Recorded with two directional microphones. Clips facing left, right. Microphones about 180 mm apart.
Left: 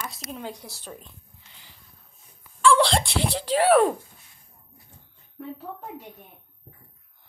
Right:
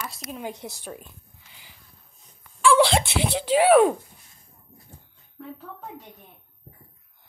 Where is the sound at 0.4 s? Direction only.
20° right (ahead or behind).